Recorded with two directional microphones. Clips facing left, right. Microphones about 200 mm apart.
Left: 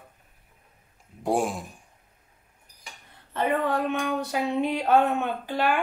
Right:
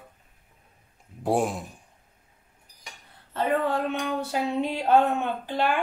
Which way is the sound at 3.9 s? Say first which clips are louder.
Left 1 dB; 15° left (ahead or behind).